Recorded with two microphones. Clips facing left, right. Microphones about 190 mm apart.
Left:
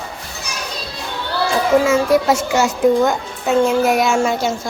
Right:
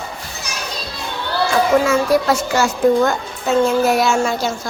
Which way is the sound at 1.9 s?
25° left (ahead or behind).